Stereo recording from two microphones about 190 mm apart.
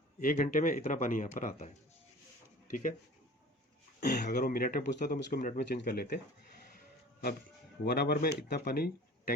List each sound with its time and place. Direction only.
0.2 s speech: 45° left (ahead or behind)
4.0 s speech: 60° left (ahead or behind)
6.7 s music: 55° left (ahead or behind)
7.9 s speech: 55° left (ahead or behind)